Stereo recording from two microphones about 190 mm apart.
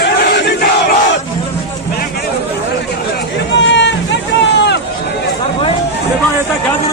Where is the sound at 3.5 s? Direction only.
70° left (ahead or behind).